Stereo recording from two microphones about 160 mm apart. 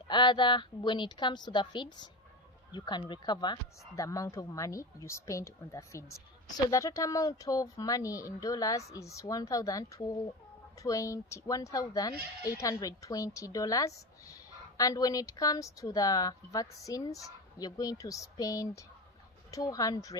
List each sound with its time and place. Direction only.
0.1 s speech: 30° left (ahead or behind)